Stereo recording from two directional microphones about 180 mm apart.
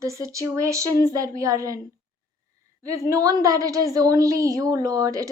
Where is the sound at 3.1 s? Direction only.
20° right (ahead or behind).